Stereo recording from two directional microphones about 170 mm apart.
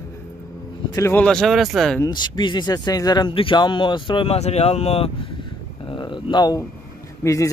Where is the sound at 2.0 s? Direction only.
25° left (ahead or behind).